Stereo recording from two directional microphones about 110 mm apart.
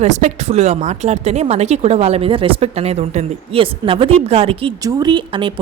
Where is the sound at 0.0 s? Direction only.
90° right; by 4.7 s 60° right (ahead or behind).